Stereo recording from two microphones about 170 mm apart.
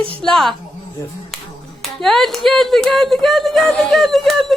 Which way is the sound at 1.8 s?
Centre (ahead or behind).